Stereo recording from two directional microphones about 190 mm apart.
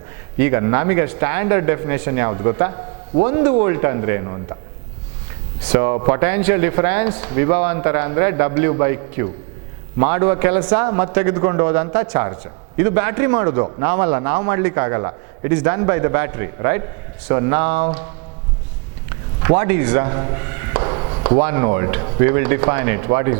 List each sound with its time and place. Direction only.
0.3 s speech: 15° right (ahead or behind)
5.7 s speech: 20° right (ahead or behind)
19.4 s speech: 15° right (ahead or behind)
20.1 s a sound: 25° right (ahead or behind)
21.4 s speech: 20° right (ahead or behind)